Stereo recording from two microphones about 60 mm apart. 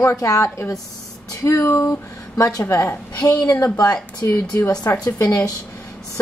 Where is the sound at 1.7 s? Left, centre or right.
Left.